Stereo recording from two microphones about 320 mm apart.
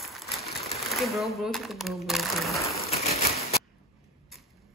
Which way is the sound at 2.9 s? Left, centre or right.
Centre.